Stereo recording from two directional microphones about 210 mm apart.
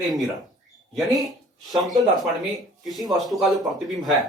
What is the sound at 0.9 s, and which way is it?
Speech, centre (ahead or behind).